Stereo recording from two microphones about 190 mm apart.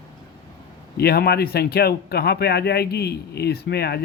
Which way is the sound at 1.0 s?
55° left (ahead or behind).